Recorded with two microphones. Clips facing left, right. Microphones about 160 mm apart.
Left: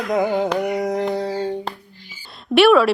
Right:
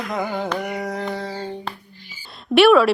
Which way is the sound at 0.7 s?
15° left (ahead or behind).